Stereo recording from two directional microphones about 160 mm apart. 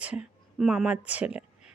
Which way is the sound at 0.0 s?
5° right (ahead or behind).